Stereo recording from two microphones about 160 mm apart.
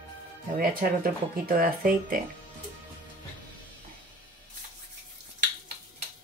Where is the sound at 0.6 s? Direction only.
65° right (ahead or behind).